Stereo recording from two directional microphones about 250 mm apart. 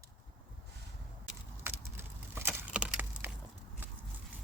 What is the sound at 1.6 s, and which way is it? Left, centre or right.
Wood, centre.